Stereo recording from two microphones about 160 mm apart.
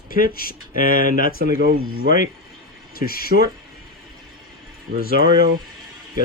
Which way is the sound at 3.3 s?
80° right.